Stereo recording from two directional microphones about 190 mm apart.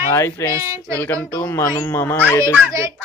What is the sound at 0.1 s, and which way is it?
Speech, 15° left (ahead or behind).